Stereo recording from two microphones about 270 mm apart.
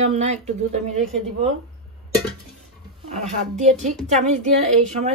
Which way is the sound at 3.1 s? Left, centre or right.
Right.